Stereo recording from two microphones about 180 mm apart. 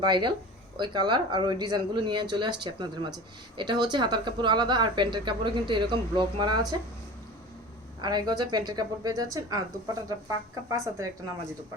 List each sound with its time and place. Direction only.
0.0 s speech: 25° right (ahead or behind)
8.0 s speech: 25° right (ahead or behind)